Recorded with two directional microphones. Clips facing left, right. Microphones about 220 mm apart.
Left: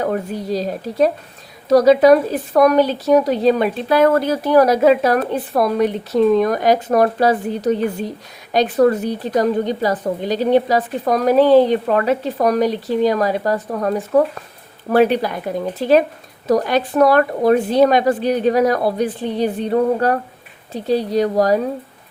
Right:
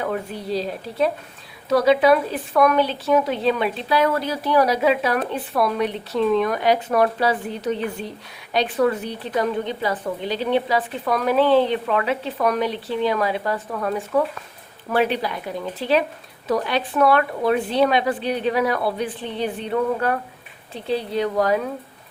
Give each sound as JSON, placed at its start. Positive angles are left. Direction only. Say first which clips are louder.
{"t": 0.0, "sound": "speech", "louder": "left 5 dB", "side_deg": 40}